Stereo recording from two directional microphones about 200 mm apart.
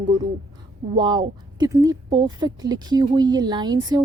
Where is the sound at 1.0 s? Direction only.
20° right (ahead or behind).